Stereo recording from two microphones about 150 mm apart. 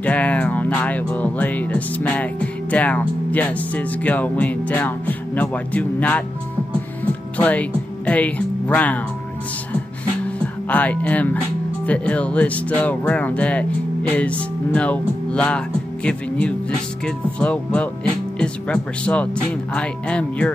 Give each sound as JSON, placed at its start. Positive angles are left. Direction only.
{"t": 0.0, "sound": "speech", "side_deg": 10}
{"t": 7.3, "sound": "speech", "side_deg": 10}
{"t": 10.2, "sound": "music", "side_deg": 10}
{"t": 11.8, "sound": "speech", "side_deg": 10}